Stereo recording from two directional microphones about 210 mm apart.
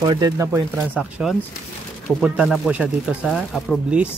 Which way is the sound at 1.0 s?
5° right (ahead or behind).